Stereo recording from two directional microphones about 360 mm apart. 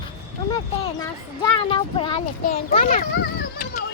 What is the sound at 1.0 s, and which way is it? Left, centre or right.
A child's voice, centre.